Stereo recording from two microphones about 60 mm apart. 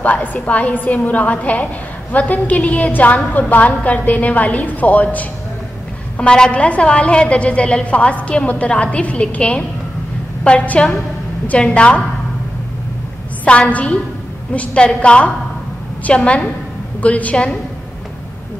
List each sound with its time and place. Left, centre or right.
0.0 s a woman's voice: left
6.1 s a woman's voice: centre
13.5 s a woman's voice: left